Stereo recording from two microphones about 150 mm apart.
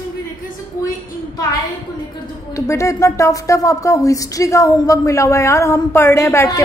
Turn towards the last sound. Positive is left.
turn(degrees=20)  # may be behind; listen again after turning